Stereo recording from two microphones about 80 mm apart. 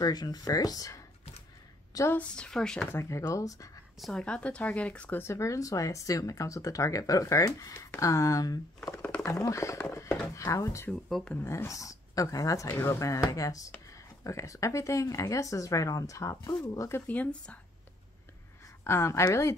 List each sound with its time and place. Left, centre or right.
0.0 s speech: left
2.1 s speech: centre
2.9 s speech: left
4.0 s speech: centre
5.2 s speech: left
11.1 s speech: centre
11.4 s speech: left
17.1 s speech: centre
18.9 s speech: left